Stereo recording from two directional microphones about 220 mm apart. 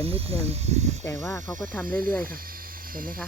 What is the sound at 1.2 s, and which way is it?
Speech, 15° left (ahead or behind).